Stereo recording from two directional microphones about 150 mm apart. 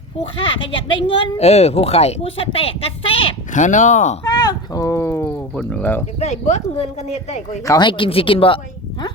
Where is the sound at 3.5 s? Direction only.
55° left (ahead or behind).